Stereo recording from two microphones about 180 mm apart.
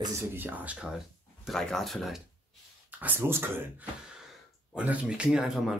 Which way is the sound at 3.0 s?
10° right (ahead or behind).